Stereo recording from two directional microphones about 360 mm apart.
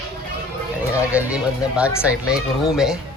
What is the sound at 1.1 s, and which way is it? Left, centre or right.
Speech, centre.